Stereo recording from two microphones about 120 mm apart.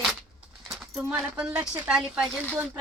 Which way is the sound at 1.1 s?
10° right (ahead or behind).